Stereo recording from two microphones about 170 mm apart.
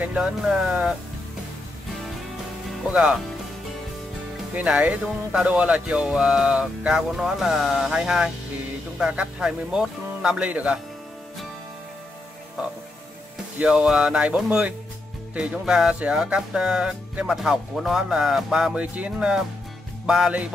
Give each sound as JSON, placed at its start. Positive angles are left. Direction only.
{"t": 0.0, "sound": "speech", "side_deg": -5}
{"t": 2.9, "sound": "speech", "side_deg": -5}
{"t": 4.6, "sound": "speech", "side_deg": -10}
{"t": 13.6, "sound": "speech", "side_deg": -5}